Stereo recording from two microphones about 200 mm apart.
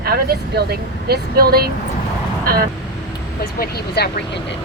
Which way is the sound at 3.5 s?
50° left (ahead or behind).